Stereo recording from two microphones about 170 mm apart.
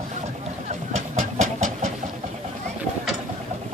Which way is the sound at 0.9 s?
40° right (ahead or behind).